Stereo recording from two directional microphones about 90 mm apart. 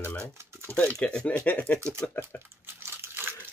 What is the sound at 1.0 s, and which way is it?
Speech, 10° left (ahead or behind).